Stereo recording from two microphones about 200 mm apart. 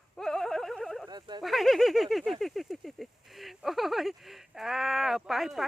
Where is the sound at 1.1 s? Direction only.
20° right (ahead or behind).